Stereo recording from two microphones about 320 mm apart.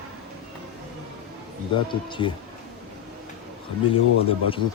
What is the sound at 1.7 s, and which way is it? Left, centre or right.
Speech, centre.